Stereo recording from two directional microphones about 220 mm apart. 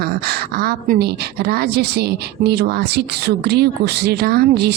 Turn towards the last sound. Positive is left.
turn(degrees=-45)  # may be behind; listen again after turning